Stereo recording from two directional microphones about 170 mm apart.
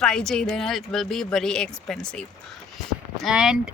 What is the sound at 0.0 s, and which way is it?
Speech, 5° left (ahead or behind).